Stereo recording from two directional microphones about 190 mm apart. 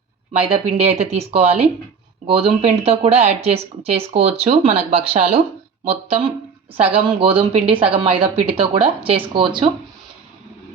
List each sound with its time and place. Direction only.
0.3 s speech: 30° right (ahead or behind)